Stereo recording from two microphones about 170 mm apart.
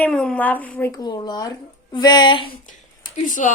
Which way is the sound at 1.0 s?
25° left (ahead or behind).